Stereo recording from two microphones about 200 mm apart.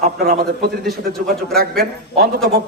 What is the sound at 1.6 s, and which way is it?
Speech, 50° right (ahead or behind).